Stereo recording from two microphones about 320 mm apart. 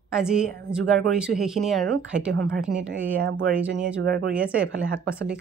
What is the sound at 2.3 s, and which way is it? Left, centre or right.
Speech, right.